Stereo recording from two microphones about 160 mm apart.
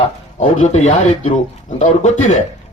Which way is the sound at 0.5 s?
50° left (ahead or behind).